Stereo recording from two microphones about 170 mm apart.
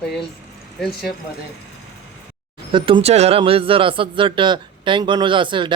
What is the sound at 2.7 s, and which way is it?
Speech, 35° right (ahead or behind).